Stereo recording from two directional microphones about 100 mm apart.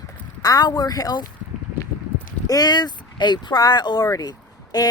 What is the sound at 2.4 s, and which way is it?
Speech, 40° left (ahead or behind).